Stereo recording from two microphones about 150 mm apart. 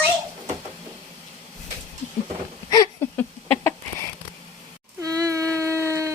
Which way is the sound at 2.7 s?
25° left (ahead or behind).